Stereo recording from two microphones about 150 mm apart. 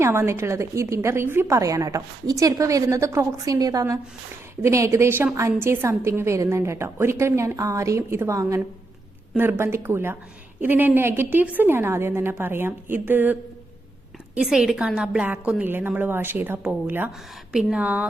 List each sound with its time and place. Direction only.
0.0 s a woman's voice: 15° right (ahead or behind)